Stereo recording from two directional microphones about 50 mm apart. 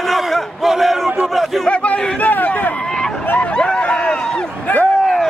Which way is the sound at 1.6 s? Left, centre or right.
Left.